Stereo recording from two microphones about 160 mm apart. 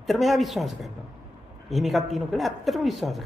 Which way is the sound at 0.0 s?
Centre (ahead or behind).